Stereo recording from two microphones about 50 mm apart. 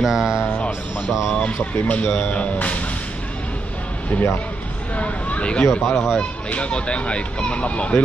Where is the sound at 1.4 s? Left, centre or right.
Left.